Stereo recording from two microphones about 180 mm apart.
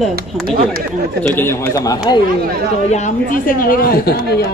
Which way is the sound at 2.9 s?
45° left (ahead or behind).